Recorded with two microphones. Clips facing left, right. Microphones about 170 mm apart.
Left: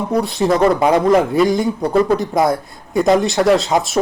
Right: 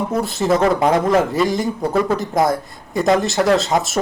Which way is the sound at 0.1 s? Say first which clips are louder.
Left 4 dB; 5° right (ahead or behind).